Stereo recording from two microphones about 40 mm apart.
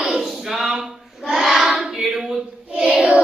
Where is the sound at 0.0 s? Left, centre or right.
Centre.